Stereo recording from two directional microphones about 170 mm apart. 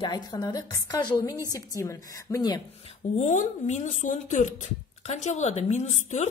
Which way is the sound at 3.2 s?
45° left (ahead or behind).